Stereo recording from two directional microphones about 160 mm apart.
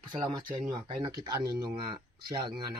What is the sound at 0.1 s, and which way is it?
Speech, 30° right (ahead or behind).